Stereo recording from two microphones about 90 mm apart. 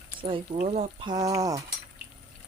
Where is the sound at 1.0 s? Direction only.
45° right (ahead or behind).